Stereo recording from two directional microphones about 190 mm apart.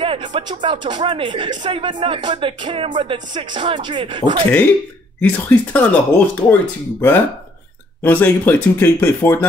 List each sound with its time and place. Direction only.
0.0 s speech: 25° right (ahead or behind)
5.2 s speech: 5° left (ahead or behind)